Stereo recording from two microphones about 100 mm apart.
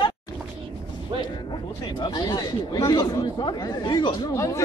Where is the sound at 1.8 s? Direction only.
45° left (ahead or behind).